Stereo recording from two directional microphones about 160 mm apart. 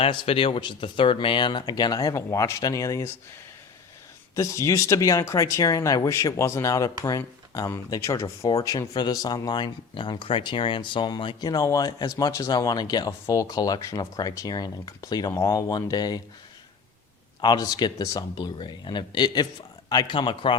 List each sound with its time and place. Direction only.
0.0 s speech: 35° left (ahead or behind)
4.4 s speech: 20° left (ahead or behind)
17.4 s speech: 25° left (ahead or behind)